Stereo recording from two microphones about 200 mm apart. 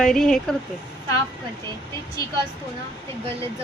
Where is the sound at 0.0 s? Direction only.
Centre (ahead or behind).